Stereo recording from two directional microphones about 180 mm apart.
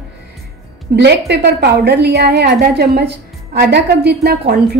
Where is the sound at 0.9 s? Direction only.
70° right (ahead or behind).